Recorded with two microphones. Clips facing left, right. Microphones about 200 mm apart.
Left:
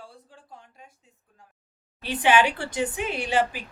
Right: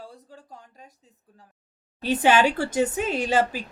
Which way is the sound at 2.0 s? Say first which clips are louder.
Right 2 dB; 40° right (ahead or behind).